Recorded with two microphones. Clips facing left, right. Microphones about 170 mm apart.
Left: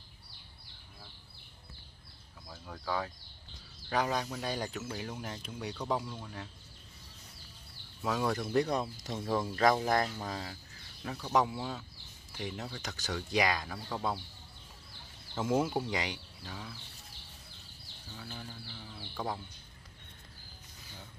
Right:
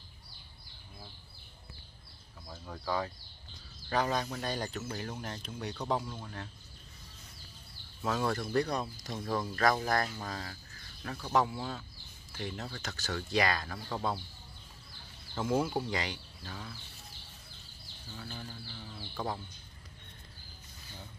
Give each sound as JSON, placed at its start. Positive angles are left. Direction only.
{"t": 2.6, "sound": "speech", "side_deg": 0}
{"t": 3.9, "sound": "speech", "side_deg": 10}
{"t": 8.0, "sound": "speech", "side_deg": 10}
{"t": 12.4, "sound": "speech", "side_deg": 15}
{"t": 13.8, "sound": "a sound", "side_deg": 0}
{"t": 15.4, "sound": "speech", "side_deg": 20}
{"t": 18.1, "sound": "a sound", "side_deg": 0}
{"t": 18.9, "sound": "speech", "side_deg": 10}